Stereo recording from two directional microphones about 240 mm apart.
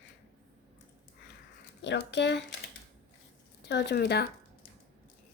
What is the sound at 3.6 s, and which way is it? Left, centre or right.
Speech, left.